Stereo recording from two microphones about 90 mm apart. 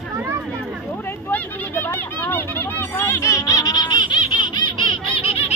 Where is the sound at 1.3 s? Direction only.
20° left (ahead or behind); by 5.4 s 85° left.